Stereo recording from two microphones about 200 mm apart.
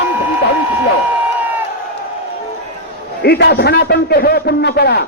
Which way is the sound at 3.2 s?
55° left (ahead or behind).